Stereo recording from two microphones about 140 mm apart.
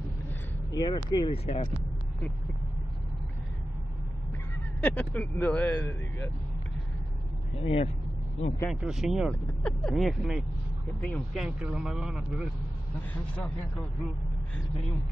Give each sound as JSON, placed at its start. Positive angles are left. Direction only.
{"t": 0.7, "sound": "speech", "side_deg": 30}
{"t": 1.3, "sound": "speech", "side_deg": 45}
{"t": 4.8, "sound": "speech", "side_deg": 10}
{"t": 7.6, "sound": "speech", "side_deg": 45}
{"t": 8.6, "sound": "speech", "side_deg": 0}
{"t": 11.0, "sound": "speech", "side_deg": 10}
{"t": 11.3, "sound": "speech", "side_deg": -5}